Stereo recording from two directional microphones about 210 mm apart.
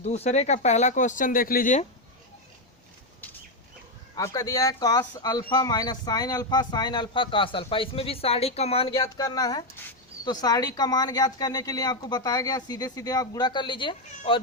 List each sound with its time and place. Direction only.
0.0 s speech: 30° left (ahead or behind)
4.1 s speech: 15° left (ahead or behind)
8.9 s speech: 15° left (ahead or behind)